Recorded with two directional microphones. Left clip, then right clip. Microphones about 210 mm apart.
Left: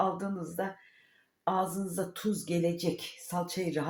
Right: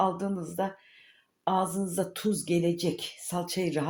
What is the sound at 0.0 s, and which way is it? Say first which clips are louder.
Speech: right 3 dB; 35° right (ahead or behind).